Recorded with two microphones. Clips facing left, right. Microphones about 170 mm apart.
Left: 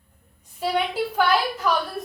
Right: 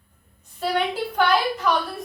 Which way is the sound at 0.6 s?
5° left (ahead or behind).